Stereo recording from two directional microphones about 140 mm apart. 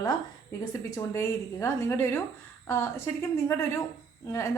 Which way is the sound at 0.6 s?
25° left (ahead or behind).